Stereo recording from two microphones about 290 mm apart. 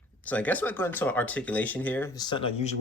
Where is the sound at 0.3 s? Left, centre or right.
Centre.